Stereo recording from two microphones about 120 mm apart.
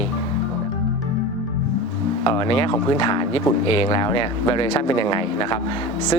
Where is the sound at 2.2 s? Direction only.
50° left (ahead or behind).